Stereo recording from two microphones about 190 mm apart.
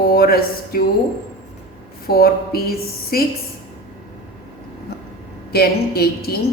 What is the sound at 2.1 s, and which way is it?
A woman's voice, 55° left (ahead or behind).